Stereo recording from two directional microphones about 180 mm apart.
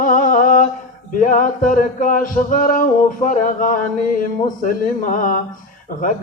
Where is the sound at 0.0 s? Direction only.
50° left (ahead or behind).